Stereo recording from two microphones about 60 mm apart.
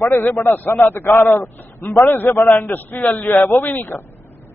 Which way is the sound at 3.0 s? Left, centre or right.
Left.